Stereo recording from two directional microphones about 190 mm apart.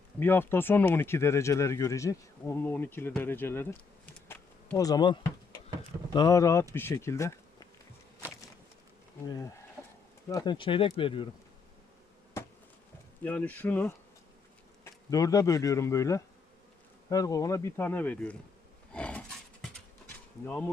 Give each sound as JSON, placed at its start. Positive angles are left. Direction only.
{"t": 0.2, "sound": "speech", "side_deg": 10}
{"t": 4.8, "sound": "speech", "side_deg": 20}
{"t": 9.2, "sound": "speech", "side_deg": 20}
{"t": 12.4, "sound": "insect", "side_deg": 15}
{"t": 13.2, "sound": "speech", "side_deg": 10}
{"t": 15.1, "sound": "speech", "side_deg": 20}
{"t": 18.9, "sound": "horse", "side_deg": 5}
{"t": 19.6, "sound": "a sound", "side_deg": 10}